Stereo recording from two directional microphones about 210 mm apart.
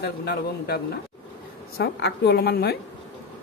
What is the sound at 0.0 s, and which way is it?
Speech, 50° left (ahead or behind).